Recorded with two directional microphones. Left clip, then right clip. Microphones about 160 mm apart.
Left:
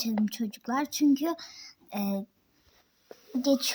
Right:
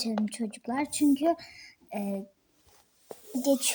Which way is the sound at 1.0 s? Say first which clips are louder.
Right 2 dB; 35° left (ahead or behind).